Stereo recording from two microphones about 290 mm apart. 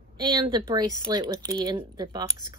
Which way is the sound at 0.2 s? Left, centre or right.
Centre.